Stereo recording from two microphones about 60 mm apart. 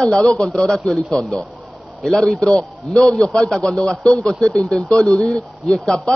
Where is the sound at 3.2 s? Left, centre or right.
Centre.